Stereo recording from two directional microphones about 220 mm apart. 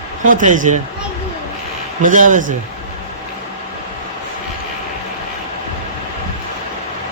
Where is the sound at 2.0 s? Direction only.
35° right (ahead or behind).